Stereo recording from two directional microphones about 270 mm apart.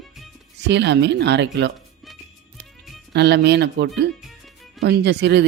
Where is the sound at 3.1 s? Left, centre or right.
Right.